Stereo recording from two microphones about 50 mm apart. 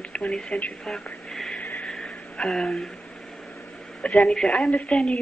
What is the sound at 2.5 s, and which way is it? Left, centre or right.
Speech, centre.